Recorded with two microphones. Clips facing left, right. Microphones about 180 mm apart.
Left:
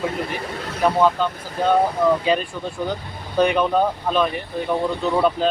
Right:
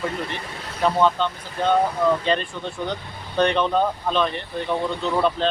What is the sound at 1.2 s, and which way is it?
Speech, 5° left (ahead or behind).